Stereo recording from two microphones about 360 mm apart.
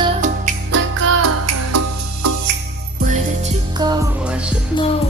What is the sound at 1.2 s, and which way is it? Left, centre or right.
Music, right.